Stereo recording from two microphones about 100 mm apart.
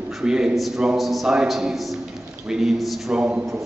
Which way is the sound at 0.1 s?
5° right (ahead or behind).